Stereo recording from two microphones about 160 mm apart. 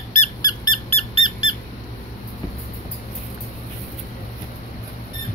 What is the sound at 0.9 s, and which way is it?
Squeak, 35° left (ahead or behind).